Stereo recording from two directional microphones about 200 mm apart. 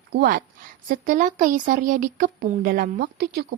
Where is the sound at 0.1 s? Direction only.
50° right (ahead or behind).